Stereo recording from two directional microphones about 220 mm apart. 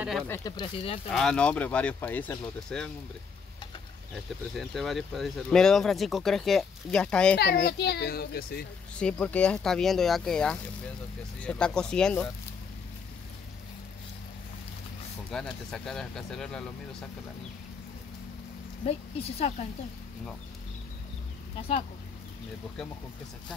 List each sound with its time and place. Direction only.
0.3 s a woman's voice: 15° left (ahead or behind)
1.1 s speech: 5° left (ahead or behind)
4.6 s speech: centre (ahead or behind)
7.3 s a child's voice: 45° left (ahead or behind)
8.9 s speech: 5° left (ahead or behind)
15.3 s speech: centre (ahead or behind)
18.9 s a woman's voice: 30° left (ahead or behind)
21.5 s a woman's voice: 25° left (ahead or behind)